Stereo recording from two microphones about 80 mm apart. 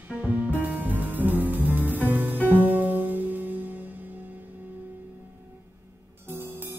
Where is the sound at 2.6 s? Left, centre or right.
Right.